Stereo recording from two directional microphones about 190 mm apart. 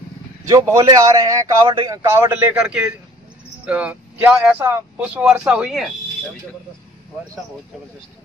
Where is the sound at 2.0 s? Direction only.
10° right (ahead or behind).